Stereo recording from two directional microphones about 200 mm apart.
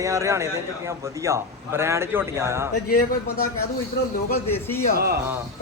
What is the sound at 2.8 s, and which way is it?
Speech, 45° left (ahead or behind).